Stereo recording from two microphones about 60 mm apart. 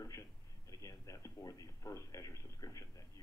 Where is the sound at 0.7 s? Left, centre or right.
Left.